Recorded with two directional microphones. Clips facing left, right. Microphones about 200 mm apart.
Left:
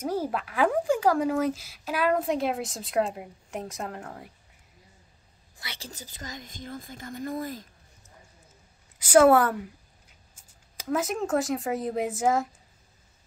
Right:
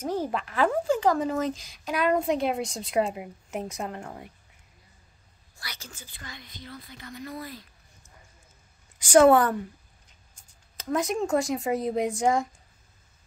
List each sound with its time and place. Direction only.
0.0 s speech: 10° left (ahead or behind)
5.6 s a woman's voice: 25° left (ahead or behind)
5.9 s speech: 40° left (ahead or behind)
8.9 s speech: 5° left (ahead or behind)